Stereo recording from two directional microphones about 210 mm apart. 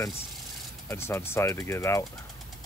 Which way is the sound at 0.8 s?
10° left (ahead or behind).